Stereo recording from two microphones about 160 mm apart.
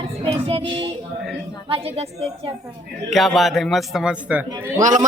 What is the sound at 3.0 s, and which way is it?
A man's voice, centre (ahead or behind).